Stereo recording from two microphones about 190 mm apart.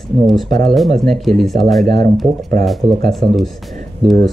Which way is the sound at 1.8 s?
50° right (ahead or behind).